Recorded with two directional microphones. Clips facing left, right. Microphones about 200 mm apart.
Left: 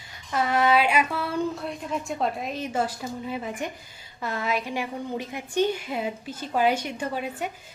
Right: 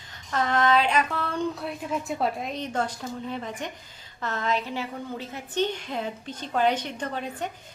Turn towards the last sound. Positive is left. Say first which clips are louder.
# left 2 dB
turn(degrees=10)  # may be behind; listen again after turning